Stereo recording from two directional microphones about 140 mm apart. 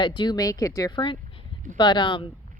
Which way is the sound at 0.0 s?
35° left (ahead or behind).